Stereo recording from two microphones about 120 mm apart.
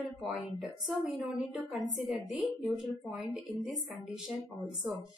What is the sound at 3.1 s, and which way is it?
Speech, 10° right (ahead or behind).